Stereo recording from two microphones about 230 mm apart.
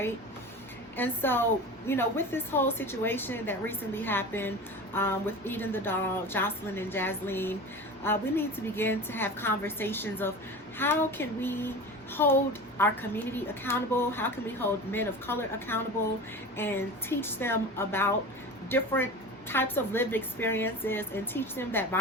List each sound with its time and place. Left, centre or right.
0.9 s a woman's voice: centre